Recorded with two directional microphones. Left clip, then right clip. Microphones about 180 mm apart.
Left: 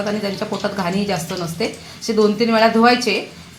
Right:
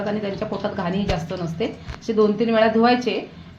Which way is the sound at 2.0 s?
35° left (ahead or behind).